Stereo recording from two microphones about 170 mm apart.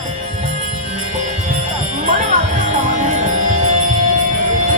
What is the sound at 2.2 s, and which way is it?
Music, 45° right (ahead or behind).